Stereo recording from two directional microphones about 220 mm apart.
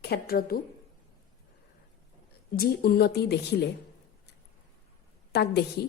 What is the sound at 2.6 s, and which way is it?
Speech, 45° left (ahead or behind).